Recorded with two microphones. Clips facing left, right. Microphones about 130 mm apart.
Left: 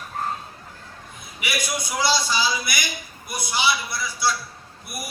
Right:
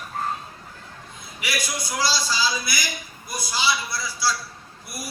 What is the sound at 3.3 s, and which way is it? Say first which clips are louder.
Speech: left 1 dB; 20° left (ahead or behind).